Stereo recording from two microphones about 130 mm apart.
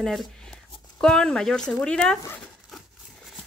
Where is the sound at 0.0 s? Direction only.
Centre (ahead or behind).